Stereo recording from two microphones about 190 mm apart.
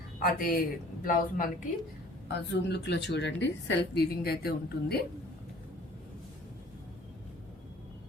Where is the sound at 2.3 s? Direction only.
60° left (ahead or behind).